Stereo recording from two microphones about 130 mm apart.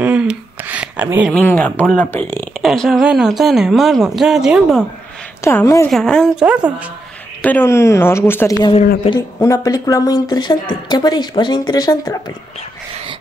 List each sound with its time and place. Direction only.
0.0 s a sound: 10° right (ahead or behind)
1.4 s speech: 10° left (ahead or behind)
2.6 s speech: centre (ahead or behind)
5.4 s speech: 20° left (ahead or behind)
5.9 s speech: 5° left (ahead or behind)
6.4 s speech: 10° right (ahead or behind)
7.4 s a woman's voice: 15° left (ahead or behind)